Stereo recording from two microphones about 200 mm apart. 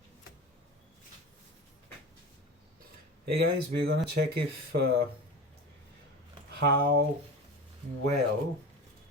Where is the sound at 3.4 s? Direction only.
55° right (ahead or behind).